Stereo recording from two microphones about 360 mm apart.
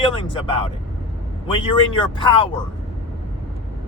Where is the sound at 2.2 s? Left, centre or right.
Centre.